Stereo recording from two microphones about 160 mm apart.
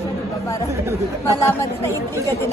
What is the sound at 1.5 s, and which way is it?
Speech, 15° left (ahead or behind).